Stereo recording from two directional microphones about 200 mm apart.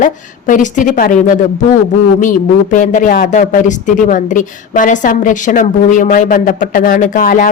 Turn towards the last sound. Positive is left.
turn(degrees=45)  # may be behind; listen again after turning